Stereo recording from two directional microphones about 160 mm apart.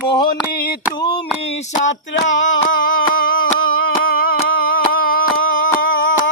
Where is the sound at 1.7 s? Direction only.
50° left (ahead or behind); by 4.3 s 65° left (ahead or behind).